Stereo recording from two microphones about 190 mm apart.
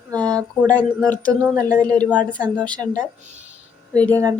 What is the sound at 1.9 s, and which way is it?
Speech, 5° left (ahead or behind).